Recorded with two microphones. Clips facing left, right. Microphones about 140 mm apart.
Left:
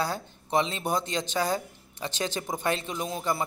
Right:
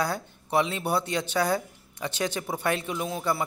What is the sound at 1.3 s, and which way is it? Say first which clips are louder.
Speech: right 2 dB; 10° left (ahead or behind).